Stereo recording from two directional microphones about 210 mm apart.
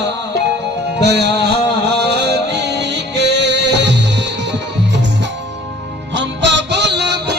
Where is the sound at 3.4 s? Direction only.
55° right (ahead or behind).